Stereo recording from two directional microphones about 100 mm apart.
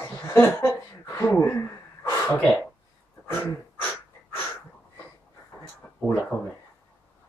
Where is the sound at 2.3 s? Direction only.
15° left (ahead or behind).